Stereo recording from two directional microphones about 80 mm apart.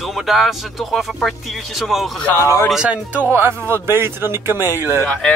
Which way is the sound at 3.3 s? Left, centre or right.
Right.